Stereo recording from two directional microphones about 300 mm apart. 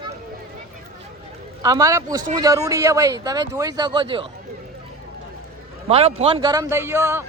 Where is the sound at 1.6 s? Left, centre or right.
Centre.